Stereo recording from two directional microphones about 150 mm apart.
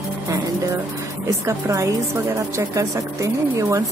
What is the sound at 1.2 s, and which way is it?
Speech, 20° right (ahead or behind).